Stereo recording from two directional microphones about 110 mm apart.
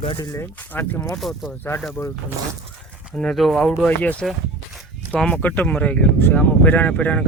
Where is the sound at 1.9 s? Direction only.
20° left (ahead or behind).